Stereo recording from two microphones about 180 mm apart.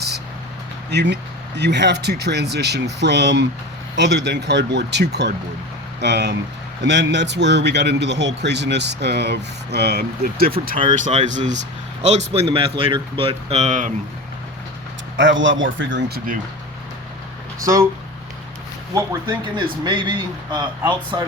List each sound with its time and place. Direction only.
0.9 s speech: 70° right (ahead or behind)
10.9 s speech: 40° right (ahead or behind)
12.3 s speech: 30° right (ahead or behind)
15.1 s speech: 85° right; by 16.3 s 60° right (ahead or behind)
18.9 s speech: 20° right (ahead or behind)